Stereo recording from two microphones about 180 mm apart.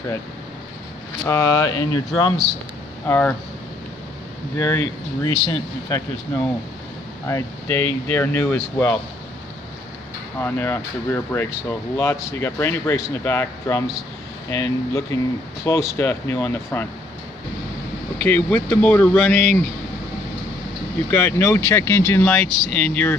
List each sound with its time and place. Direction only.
1.2 s speech: 15° left (ahead or behind)
3.1 s speech: 10° left (ahead or behind)
4.6 s speech: 20° left (ahead or behind)
10.4 s speech: 15° left (ahead or behind)
18.2 s speech: 10° left (ahead or behind)
21.1 s speech: 10° left (ahead or behind)